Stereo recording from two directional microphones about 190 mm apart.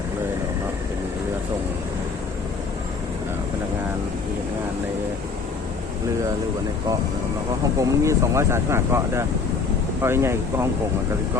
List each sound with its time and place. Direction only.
7.8 s speech: 15° right (ahead or behind)